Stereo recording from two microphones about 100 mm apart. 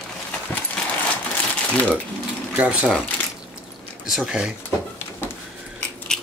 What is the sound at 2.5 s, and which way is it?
Speech, 10° right (ahead or behind).